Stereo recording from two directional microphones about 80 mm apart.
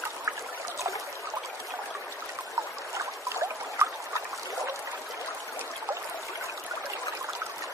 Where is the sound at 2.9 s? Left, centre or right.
Right.